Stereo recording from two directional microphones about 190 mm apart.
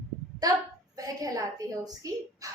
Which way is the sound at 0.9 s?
20° right (ahead or behind).